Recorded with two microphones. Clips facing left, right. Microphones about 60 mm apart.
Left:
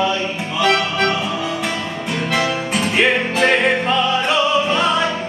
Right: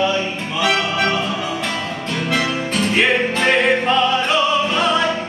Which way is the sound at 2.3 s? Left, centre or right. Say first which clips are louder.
Left 1 dB; centre.